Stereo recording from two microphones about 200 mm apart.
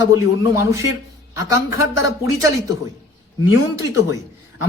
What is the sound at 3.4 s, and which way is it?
Speech, 15° right (ahead or behind).